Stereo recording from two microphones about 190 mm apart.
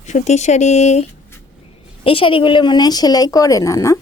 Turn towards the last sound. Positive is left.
turn(degrees=15)  # may be behind; listen again after turning